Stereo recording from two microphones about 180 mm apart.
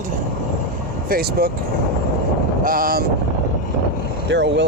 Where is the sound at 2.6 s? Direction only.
50° right (ahead or behind).